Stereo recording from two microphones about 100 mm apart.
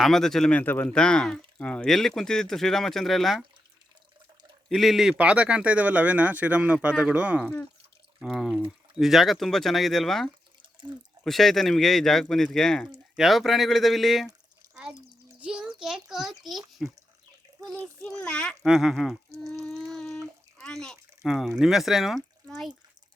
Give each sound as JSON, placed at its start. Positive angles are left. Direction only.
{"t": 0.0, "sound": "speech", "side_deg": 5}
{"t": 0.6, "sound": "speech", "side_deg": 20}
{"t": 4.7, "sound": "speech", "side_deg": -5}
{"t": 7.4, "sound": "a child's voice", "side_deg": 15}
{"t": 8.3, "sound": "speech", "side_deg": 0}
{"t": 15.4, "sound": "a sound", "side_deg": -10}
{"t": 15.8, "sound": "a child's voice", "side_deg": -5}
{"t": 18.2, "sound": "a child's voice", "side_deg": 10}
{"t": 18.6, "sound": "speech", "side_deg": -5}
{"t": 19.3, "sound": "speech", "side_deg": -35}
{"t": 19.9, "sound": "bathtub", "side_deg": 5}
{"t": 21.2, "sound": "speech", "side_deg": 0}